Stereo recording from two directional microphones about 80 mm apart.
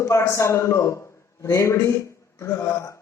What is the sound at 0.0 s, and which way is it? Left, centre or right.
A man's voice, left.